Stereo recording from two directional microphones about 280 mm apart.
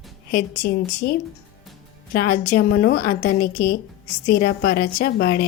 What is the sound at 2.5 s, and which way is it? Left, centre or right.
A woman's voice, left.